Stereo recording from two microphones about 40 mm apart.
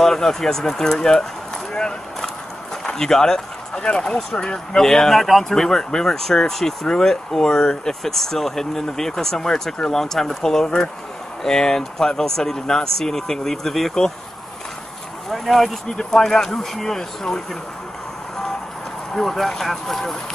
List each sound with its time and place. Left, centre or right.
0.0 s speech: centre
1.7 s a sound: centre
2.8 s speech: centre
5.5 s speech: centre
15.2 s speech: centre
19.1 s speech: centre